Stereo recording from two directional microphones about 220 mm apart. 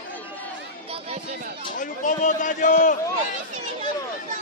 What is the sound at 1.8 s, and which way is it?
A man's voice, 35° left (ahead or behind).